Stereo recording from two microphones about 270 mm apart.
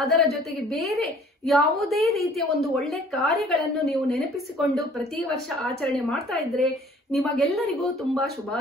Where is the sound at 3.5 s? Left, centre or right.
Left.